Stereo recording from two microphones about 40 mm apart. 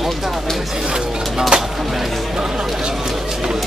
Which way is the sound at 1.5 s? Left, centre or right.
Right.